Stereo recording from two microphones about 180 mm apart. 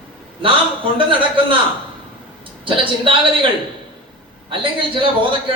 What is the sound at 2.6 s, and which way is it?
Speech, 30° right (ahead or behind).